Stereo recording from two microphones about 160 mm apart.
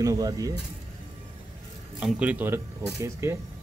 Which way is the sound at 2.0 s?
10° right (ahead or behind).